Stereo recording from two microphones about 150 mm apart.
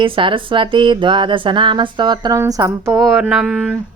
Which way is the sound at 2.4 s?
20° right (ahead or behind).